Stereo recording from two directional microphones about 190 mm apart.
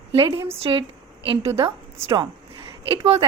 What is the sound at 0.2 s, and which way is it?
A woman's voice, 25° right (ahead or behind).